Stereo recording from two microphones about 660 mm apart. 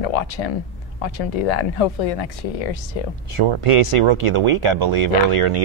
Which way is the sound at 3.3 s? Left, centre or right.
Right.